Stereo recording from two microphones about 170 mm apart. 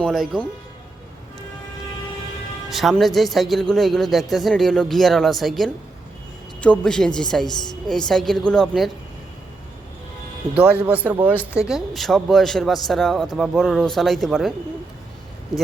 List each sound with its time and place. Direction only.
0.0 s a man's voice: 5° left (ahead or behind)
2.6 s a man's voice: centre (ahead or behind)
10.8 s a man's voice: 10° right (ahead or behind)